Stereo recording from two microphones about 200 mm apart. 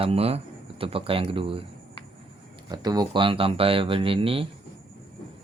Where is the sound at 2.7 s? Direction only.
20° right (ahead or behind).